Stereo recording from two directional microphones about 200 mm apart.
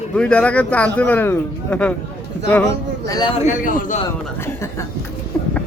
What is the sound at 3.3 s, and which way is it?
Speech, 35° left (ahead or behind).